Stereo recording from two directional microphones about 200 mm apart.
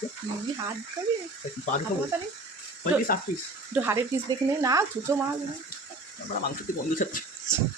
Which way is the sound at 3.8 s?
15° right (ahead or behind).